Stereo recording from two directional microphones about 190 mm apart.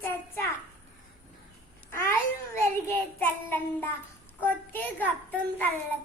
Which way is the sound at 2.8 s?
10° left (ahead or behind).